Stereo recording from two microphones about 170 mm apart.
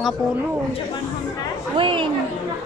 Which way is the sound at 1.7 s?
30° right (ahead or behind).